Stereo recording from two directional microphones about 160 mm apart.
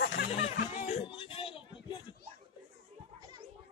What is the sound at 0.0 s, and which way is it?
Music, 90° left.